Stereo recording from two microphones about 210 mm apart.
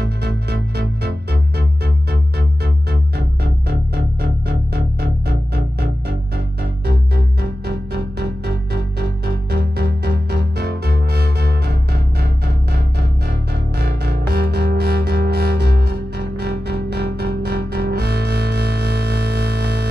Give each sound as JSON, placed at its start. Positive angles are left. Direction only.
{"t": 0.2, "sound": "music", "side_deg": -50}